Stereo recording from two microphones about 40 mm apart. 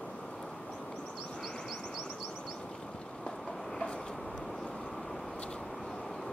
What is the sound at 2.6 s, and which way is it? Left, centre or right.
Vehicle, centre.